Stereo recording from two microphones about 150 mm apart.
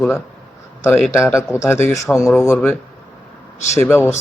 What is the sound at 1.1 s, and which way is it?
Speech, 20° left (ahead or behind).